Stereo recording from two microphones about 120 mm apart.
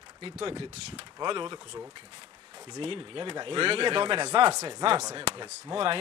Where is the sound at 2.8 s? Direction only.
50° right (ahead or behind).